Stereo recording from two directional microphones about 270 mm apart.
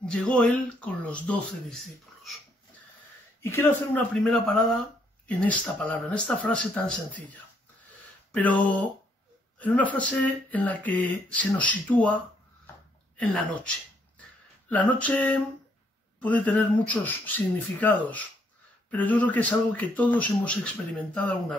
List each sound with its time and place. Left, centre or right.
0.0 s speech: centre
3.4 s speech: centre
13.2 s speech: centre